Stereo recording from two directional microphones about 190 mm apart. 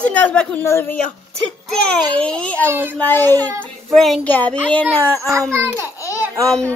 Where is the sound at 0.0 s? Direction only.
5° left (ahead or behind).